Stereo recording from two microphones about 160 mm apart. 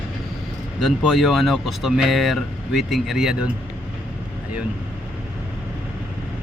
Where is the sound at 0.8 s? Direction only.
Centre (ahead or behind).